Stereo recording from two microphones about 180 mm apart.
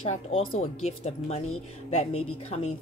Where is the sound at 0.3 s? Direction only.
30° left (ahead or behind).